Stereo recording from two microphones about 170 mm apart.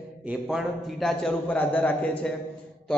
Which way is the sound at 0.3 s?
Centre (ahead or behind).